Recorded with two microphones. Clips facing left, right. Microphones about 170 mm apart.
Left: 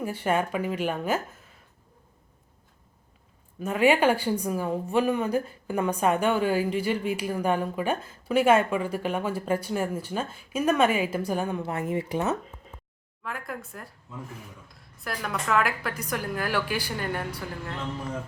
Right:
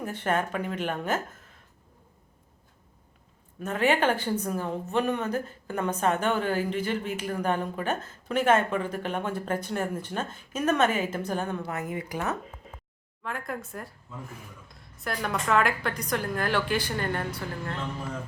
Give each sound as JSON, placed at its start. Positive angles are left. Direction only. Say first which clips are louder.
{"t": 0.0, "sound": "a woman's voice", "louder": "left 2 dB", "side_deg": 10}
{"t": 3.6, "sound": "a woman's voice", "louder": "left 3 dB", "side_deg": 10}
{"t": 11.6, "sound": "speech", "louder": "left 4 dB", "side_deg": 30}
{"t": 13.2, "sound": "a woman's voice", "louder": "right 1 dB", "side_deg": 0}